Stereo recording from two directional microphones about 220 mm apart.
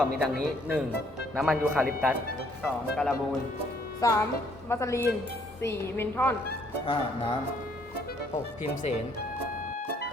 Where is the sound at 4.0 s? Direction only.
15° left (ahead or behind).